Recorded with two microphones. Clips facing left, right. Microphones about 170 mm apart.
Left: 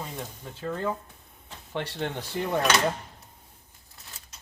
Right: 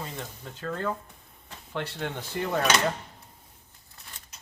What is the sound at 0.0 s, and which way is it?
Speech, 10° left (ahead or behind).